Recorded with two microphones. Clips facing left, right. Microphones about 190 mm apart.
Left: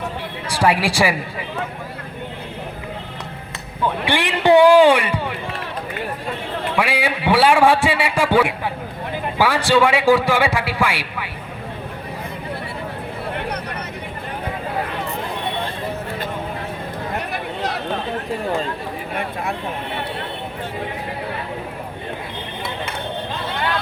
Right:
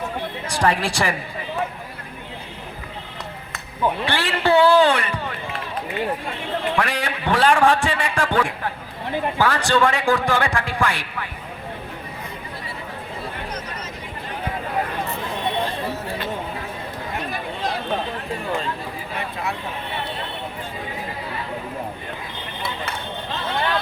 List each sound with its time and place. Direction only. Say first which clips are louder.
0.6 s a man's voice: left 4 dB; 10° left (ahead or behind)
4.0 s a man's voice: left 4 dB; 15° left (ahead or behind)
6.7 s a man's voice: left 3 dB; 10° left (ahead or behind)
17.3 s a sound: left 2 dB; 70° left (ahead or behind)